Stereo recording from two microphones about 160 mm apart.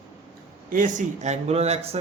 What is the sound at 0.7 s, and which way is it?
A man's voice, 55° right (ahead or behind).